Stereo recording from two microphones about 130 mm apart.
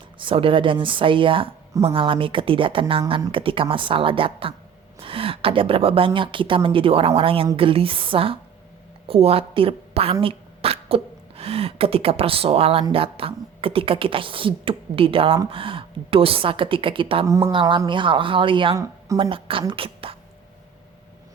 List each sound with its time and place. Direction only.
0.2 s a woman's voice: 40° right (ahead or behind)
17.2 s speech: 25° right (ahead or behind)
17.5 s speech: 40° right (ahead or behind)
18.8 s a woman's voice: 25° right (ahead or behind)
19.2 s speech: 45° right (ahead or behind)